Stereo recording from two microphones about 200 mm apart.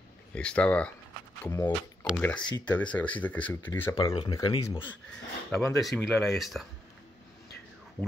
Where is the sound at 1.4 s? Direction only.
15° left (ahead or behind); by 6.7 s centre (ahead or behind).